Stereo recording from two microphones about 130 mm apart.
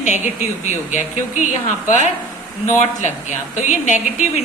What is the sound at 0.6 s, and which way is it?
A woman's voice, 70° left (ahead or behind).